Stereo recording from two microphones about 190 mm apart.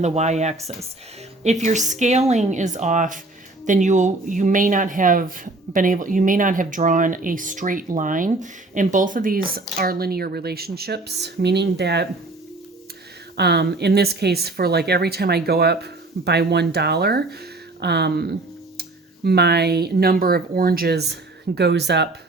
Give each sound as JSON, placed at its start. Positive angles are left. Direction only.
{"t": 0.0, "sound": "a woman's voice", "side_deg": -35}
{"t": 13.3, "sound": "speech", "side_deg": -60}